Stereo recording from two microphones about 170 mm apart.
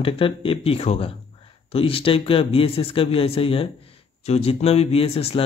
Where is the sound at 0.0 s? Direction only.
30° left (ahead or behind).